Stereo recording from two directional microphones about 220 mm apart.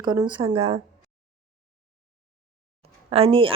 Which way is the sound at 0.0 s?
20° right (ahead or behind).